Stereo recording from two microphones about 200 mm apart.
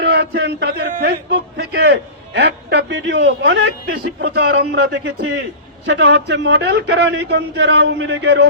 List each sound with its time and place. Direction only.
0.0 s speech: 55° right (ahead or behind)
3.8 s a man's voice: 55° right (ahead or behind)